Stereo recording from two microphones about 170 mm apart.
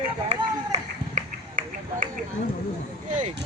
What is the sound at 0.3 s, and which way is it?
Run, 45° right (ahead or behind).